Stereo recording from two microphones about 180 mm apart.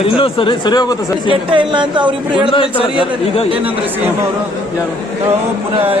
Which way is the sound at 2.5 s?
30° left (ahead or behind).